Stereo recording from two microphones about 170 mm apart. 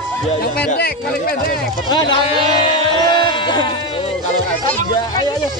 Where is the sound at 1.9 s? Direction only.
25° left (ahead or behind).